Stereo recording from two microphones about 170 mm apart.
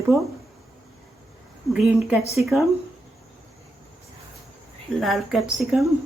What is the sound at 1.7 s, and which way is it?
Speech, 5° right (ahead or behind).